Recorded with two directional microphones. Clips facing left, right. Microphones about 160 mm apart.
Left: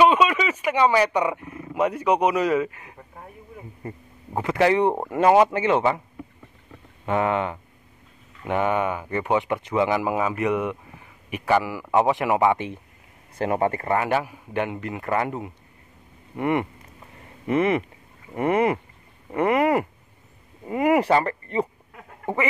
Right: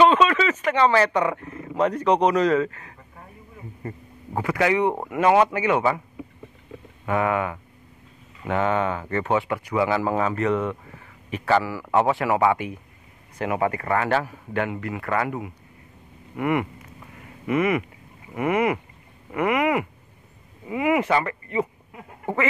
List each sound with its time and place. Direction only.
0.0 s speech: 10° left (ahead or behind)
4.4 s a man's voice: 25° left (ahead or behind)
7.1 s a man's voice: 25° left (ahead or behind)
13.9 s a man's voice: 15° left (ahead or behind); by 21.6 s 35° left (ahead or behind)